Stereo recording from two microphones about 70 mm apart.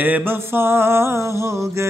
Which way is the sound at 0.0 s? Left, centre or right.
Right.